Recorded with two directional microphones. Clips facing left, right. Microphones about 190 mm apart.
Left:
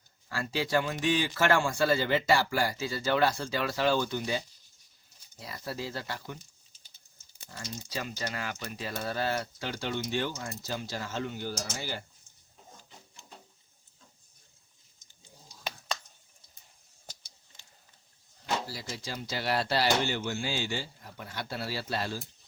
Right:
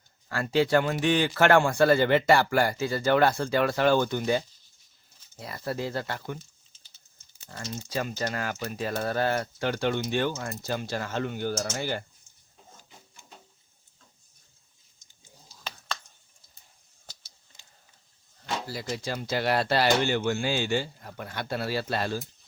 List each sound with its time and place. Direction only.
0.3 s speech: 55° right (ahead or behind)
7.5 s speech: 50° right (ahead or behind)
17.1 s a sound: 15° left (ahead or behind)
18.7 s speech: 55° right (ahead or behind)